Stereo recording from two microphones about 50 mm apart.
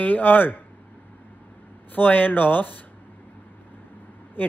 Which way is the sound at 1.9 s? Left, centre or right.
Left.